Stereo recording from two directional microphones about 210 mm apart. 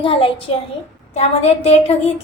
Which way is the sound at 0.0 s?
25° left (ahead or behind).